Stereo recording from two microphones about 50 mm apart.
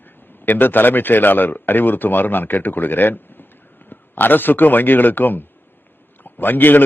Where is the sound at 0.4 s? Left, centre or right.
Left.